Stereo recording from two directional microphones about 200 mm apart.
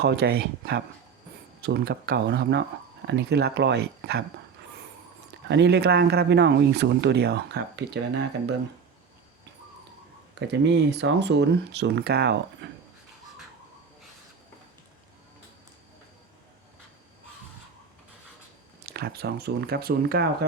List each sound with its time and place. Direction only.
0.0 s speech: 55° right (ahead or behind)
5.5 s speech: 60° right (ahead or behind)
10.4 s speech: 60° right (ahead or behind)
12.6 s a sound: 60° right (ahead or behind)
18.9 s speech: 50° right (ahead or behind)